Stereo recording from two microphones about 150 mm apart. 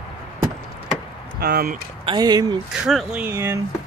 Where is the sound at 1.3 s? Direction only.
90° right.